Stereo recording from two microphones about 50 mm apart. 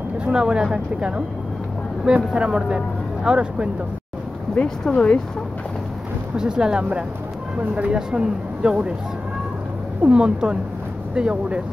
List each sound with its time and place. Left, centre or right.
0.2 s speech: centre
4.6 s speech: centre
6.3 s speech: centre
10.0 s speech: centre